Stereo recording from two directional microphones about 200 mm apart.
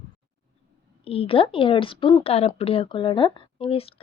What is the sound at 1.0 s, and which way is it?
Speech, 30° left (ahead or behind).